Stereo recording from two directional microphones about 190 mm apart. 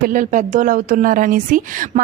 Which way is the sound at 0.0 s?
45° right (ahead or behind).